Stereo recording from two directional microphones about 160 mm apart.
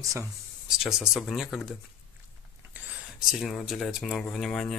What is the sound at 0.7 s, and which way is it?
Speech, 5° right (ahead or behind).